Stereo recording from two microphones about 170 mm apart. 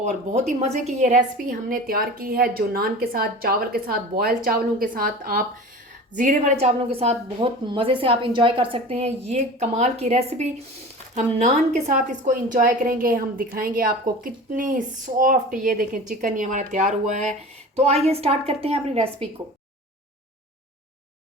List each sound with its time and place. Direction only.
0.0 s a woman's voice: 40° right (ahead or behind)